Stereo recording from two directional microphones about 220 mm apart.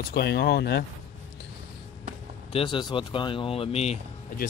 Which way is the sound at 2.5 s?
20° left (ahead or behind).